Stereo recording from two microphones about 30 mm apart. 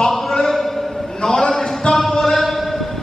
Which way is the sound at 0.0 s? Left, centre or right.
Centre.